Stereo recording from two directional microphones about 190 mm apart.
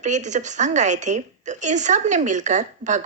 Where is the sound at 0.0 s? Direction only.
40° right (ahead or behind).